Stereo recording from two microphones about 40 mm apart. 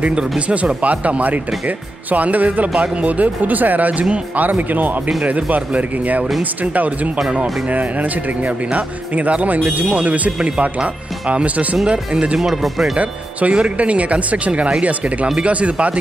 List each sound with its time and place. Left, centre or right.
0.1 s speech: right
12.4 s speech: centre
12.9 s speech: right